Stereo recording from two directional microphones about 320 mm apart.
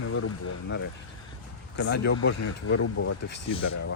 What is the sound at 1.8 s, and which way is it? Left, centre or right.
Speech, left.